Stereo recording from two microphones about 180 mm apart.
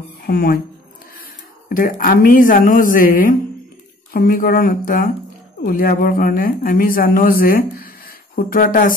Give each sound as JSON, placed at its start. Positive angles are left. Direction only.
{"t": 0.3, "sound": "speech", "side_deg": 60}
{"t": 1.7, "sound": "speech", "side_deg": 50}